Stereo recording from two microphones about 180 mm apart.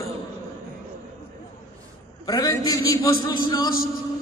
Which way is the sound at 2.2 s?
20° left (ahead or behind).